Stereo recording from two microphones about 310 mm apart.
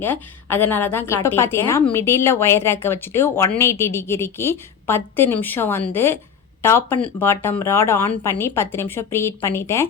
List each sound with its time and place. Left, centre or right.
0.0 s speech: centre